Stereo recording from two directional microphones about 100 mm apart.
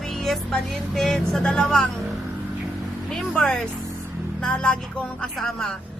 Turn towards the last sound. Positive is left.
turn(degrees=5)  # may be behind; listen again after turning